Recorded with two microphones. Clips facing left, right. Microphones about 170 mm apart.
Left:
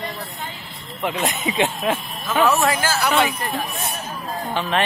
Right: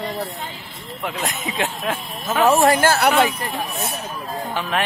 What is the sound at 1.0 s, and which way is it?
Speech, centre (ahead or behind).